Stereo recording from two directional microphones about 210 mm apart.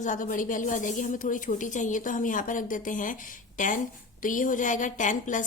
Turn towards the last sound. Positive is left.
turn(degrees=35)  # may be behind; listen again after turning